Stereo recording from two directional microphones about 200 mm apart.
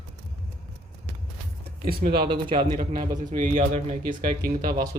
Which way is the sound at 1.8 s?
50° right (ahead or behind).